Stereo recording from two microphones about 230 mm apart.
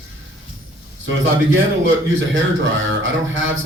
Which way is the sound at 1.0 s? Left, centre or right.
Right.